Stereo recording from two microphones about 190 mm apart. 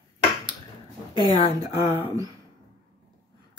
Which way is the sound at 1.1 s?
20° right (ahead or behind).